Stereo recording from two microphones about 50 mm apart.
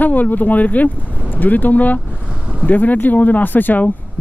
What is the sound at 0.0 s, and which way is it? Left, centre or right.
Speech, left.